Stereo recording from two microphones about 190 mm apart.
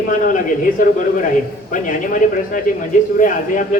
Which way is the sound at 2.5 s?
45° left (ahead or behind).